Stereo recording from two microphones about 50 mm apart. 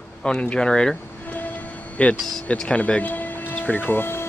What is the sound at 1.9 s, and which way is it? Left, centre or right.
Speech, left.